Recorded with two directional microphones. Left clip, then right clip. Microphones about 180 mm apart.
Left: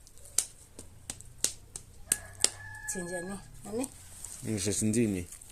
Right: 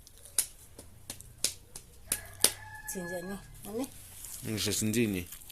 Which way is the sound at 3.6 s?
15° left (ahead or behind).